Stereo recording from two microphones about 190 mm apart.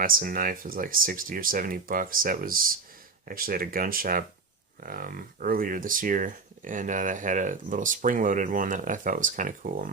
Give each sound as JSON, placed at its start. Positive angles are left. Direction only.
{"t": 0.0, "sound": "speech", "side_deg": -45}